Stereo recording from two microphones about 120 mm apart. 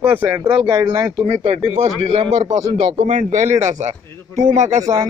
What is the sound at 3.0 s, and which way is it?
Speech, 85° right.